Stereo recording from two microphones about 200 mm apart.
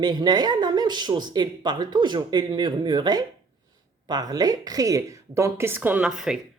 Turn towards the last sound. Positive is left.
turn(degrees=0)  # may be behind; listen again after turning